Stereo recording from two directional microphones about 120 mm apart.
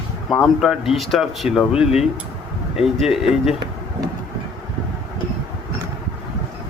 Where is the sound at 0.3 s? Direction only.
Centre (ahead or behind).